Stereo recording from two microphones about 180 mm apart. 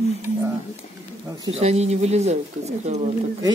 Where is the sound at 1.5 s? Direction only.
35° right (ahead or behind).